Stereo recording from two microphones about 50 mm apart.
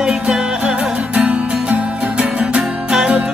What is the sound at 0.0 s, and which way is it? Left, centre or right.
Music, centre.